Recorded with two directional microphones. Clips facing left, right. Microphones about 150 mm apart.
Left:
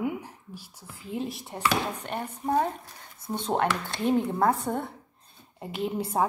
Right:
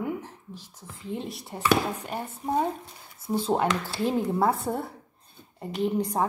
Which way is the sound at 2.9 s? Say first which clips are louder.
Right 2 dB; 25° right (ahead or behind).